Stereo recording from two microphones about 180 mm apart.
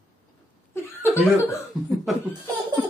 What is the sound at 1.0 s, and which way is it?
Speech, 15° left (ahead or behind).